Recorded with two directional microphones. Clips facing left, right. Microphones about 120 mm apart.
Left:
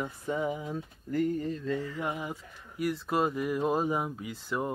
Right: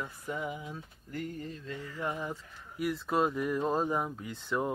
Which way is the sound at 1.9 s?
15° left (ahead or behind).